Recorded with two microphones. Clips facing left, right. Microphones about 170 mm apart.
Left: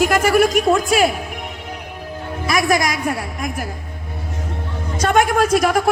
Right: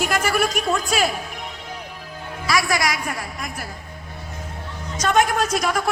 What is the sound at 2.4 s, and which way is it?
Music, 20° left (ahead or behind).